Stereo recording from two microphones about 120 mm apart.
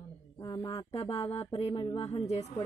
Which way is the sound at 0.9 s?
60° left (ahead or behind).